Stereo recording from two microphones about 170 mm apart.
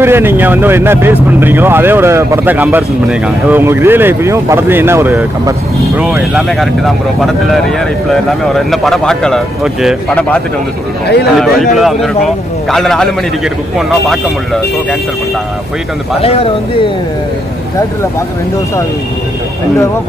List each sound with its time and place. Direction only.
0.0 s speech: 15° right (ahead or behind)
8.3 s speech: centre (ahead or behind)
11.3 s speech: centre (ahead or behind)
16.2 s speech: 35° left (ahead or behind)